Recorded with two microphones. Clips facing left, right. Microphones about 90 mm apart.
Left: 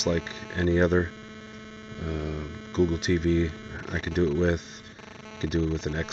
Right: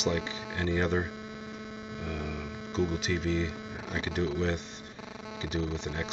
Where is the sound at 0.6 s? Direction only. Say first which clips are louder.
Left 7 dB; 40° left (ahead or behind).